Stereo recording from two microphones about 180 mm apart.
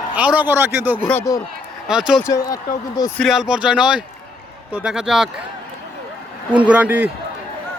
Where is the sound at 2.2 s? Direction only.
20° left (ahead or behind).